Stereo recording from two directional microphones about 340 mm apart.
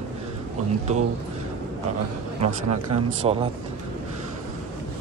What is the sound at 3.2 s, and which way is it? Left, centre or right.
Speech, centre.